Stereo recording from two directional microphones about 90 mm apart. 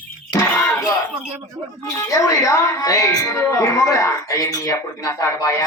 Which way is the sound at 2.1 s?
35° left (ahead or behind).